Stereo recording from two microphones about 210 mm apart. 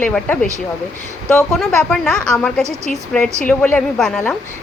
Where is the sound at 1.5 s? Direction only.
Centre (ahead or behind).